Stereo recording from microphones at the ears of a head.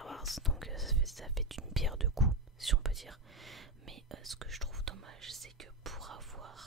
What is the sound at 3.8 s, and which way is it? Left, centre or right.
Whispering, right.